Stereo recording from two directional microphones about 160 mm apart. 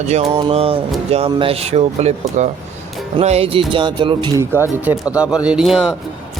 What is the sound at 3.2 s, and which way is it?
Speech, 40° right (ahead or behind).